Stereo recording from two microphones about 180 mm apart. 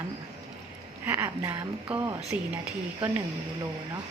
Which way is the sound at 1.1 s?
15° right (ahead or behind).